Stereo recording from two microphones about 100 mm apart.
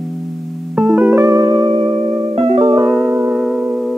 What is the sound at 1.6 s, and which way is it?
Music, 65° right (ahead or behind).